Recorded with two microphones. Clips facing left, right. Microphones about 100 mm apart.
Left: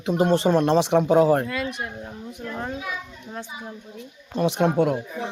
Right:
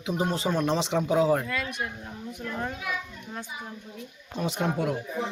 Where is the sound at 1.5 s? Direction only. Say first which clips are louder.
Left 3 dB; 30° left (ahead or behind).